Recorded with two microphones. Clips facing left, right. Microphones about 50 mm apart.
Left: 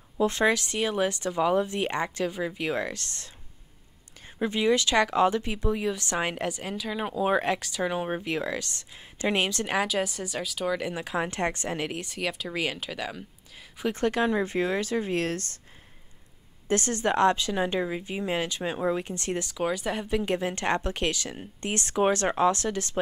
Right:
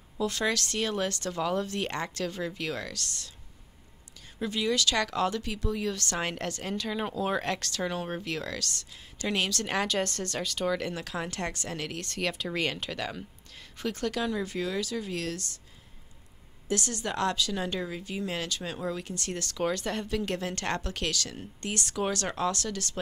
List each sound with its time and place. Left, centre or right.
0.2 s speech: left
4.4 s speech: left
9.7 s speech: centre
12.1 s speech: centre
13.9 s speech: left
16.6 s speech: left